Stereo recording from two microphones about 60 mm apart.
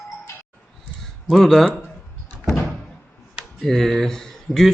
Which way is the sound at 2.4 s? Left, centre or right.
Centre.